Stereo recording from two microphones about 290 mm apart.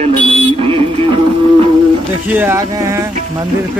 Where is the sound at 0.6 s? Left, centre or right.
Centre.